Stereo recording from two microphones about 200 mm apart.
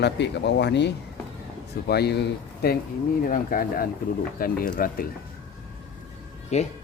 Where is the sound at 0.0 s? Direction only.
60° left (ahead or behind).